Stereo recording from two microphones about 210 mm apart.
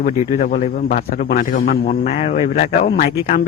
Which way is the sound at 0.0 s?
40° left (ahead or behind).